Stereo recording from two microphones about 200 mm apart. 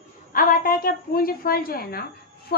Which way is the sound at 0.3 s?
45° left (ahead or behind).